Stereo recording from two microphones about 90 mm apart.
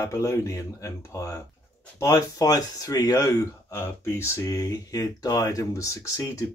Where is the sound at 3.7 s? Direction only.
25° left (ahead or behind).